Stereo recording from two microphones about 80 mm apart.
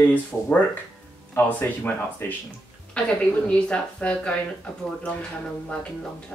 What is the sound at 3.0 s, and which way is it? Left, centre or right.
A woman's voice, centre.